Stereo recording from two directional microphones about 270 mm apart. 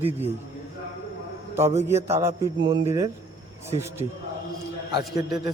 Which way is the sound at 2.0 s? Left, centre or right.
Centre.